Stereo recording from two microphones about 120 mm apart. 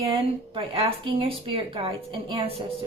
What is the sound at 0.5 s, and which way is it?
Speech, 50° right (ahead or behind).